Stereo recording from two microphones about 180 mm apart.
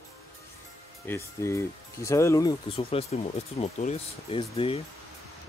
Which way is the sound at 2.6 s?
30° left (ahead or behind).